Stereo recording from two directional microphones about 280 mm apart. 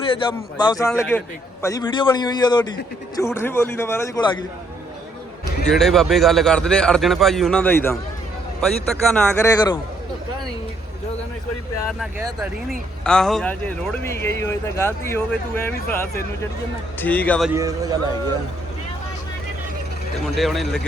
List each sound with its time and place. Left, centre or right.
0.1 s speech: centre
5.6 s a man's voice: centre
13.1 s a man's voice: centre
17.5 s a man's voice: centre
20.2 s a man's voice: centre